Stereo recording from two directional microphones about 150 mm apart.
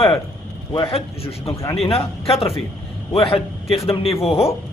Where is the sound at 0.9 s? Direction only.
40° left (ahead or behind).